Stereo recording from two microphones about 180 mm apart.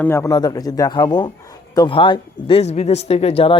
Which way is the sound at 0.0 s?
15° left (ahead or behind).